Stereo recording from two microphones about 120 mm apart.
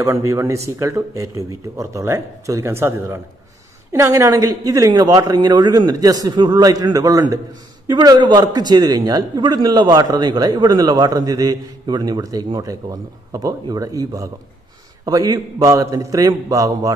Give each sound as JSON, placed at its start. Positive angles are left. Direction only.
{"t": 0.0, "sound": "a man's voice", "side_deg": -25}